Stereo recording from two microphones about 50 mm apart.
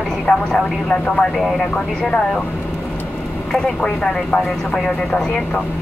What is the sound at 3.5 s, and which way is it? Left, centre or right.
Speech, centre.